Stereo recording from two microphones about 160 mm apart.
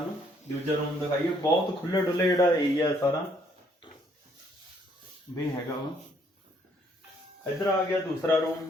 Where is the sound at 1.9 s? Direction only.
25° left (ahead or behind).